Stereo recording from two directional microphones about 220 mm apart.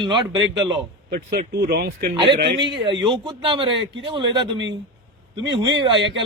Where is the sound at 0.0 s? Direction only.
20° right (ahead or behind).